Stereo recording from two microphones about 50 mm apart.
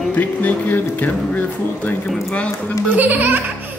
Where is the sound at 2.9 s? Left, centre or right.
Right.